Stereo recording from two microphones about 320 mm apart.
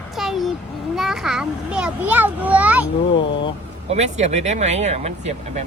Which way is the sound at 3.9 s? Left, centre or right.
Right.